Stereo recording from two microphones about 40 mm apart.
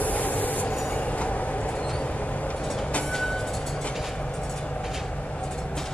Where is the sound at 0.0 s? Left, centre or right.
Left.